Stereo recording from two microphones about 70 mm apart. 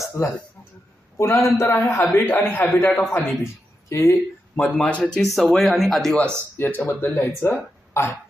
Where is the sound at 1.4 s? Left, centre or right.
Left.